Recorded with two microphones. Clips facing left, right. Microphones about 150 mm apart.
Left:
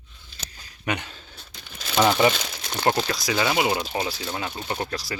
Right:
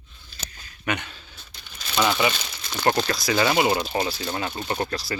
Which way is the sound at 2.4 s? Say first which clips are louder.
Left 3 dB; 80° left.